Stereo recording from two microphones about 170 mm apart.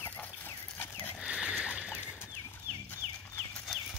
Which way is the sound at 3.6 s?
Centre (ahead or behind).